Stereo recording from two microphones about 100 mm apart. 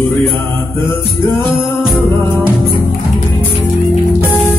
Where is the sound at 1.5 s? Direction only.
20° left (ahead or behind).